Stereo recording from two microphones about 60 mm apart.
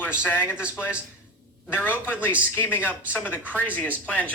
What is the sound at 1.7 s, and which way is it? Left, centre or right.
A woman's voice, left.